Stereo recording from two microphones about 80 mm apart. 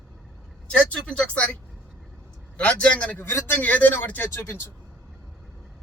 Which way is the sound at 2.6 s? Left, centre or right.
Centre.